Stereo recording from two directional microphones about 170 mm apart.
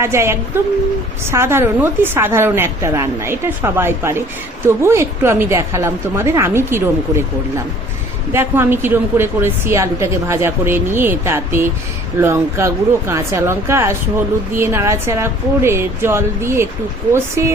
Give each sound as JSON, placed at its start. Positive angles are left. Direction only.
{"t": 0.0, "sound": "speech", "side_deg": -15}
{"t": 8.3, "sound": "speech", "side_deg": -15}